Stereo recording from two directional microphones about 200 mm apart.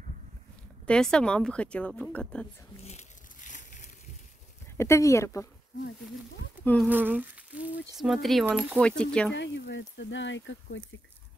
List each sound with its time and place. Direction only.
0.8 s speech: 5° left (ahead or behind)
2.8 s a sound: 35° left (ahead or behind)
4.7 s speech: 15° left (ahead or behind)
6.6 s speech: 10° left (ahead or behind)
6.9 s humming: 10° right (ahead or behind)
7.9 s speech: centre (ahead or behind)
9.3 s speech: 60° left (ahead or behind)